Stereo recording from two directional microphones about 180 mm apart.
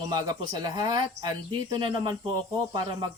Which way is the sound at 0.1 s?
20° right (ahead or behind).